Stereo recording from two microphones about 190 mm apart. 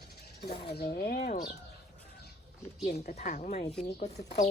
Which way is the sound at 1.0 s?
55° left (ahead or behind).